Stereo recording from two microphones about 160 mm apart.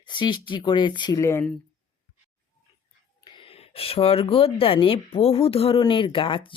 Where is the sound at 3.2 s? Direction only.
30° left (ahead or behind).